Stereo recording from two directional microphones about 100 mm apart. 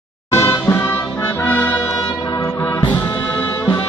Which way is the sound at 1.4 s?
20° left (ahead or behind).